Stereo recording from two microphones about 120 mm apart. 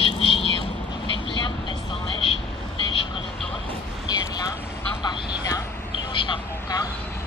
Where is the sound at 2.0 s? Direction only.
50° left (ahead or behind).